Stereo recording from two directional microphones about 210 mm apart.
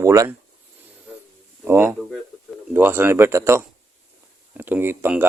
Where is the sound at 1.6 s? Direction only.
5° right (ahead or behind).